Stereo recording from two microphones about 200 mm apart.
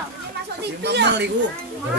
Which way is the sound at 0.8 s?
60° right (ahead or behind).